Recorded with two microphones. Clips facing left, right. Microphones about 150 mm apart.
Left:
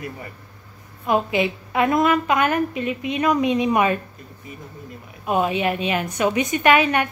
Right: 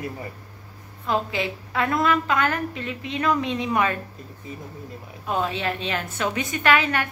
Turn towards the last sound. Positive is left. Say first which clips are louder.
# left 4 dB
turn(degrees=20)  # may be behind; listen again after turning